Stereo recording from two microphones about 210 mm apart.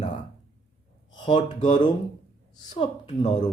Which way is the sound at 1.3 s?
35° left (ahead or behind).